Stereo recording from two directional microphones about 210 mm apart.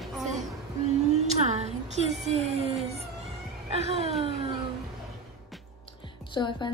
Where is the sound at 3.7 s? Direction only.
30° right (ahead or behind).